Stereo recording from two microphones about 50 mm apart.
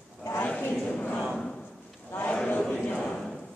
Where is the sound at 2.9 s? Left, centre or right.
Centre.